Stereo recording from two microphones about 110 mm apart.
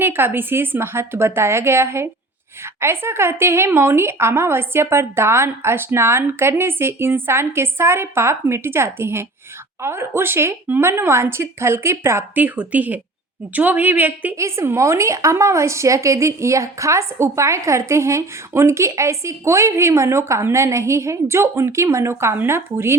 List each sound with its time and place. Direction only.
0.0 s a woman's voice: 20° right (ahead or behind)